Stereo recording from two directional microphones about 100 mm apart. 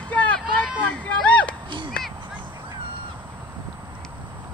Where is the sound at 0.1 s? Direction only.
15° left (ahead or behind).